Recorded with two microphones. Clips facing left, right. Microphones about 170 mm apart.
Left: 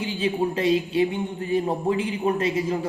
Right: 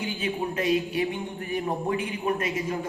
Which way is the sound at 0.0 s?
30° left (ahead or behind).